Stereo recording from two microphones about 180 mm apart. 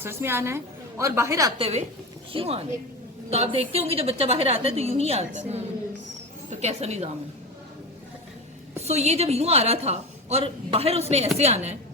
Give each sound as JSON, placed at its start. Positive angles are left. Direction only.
{"t": 0.0, "sound": "a woman's voice", "side_deg": -15}
{"t": 1.5, "sound": "a woman's voice", "side_deg": -30}
{"t": 8.8, "sound": "a woman's voice", "side_deg": -35}